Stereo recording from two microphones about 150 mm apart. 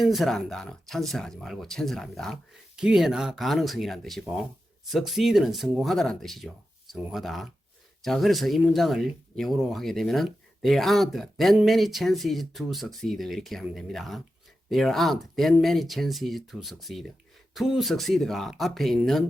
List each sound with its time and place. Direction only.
0.0 s speech: centre (ahead or behind)